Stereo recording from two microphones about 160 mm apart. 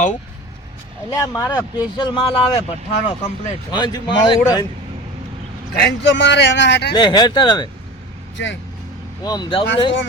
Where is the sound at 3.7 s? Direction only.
25° left (ahead or behind).